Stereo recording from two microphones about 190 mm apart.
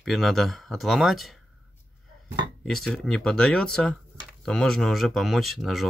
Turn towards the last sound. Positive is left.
turn(degrees=0)  # may be behind; listen again after turning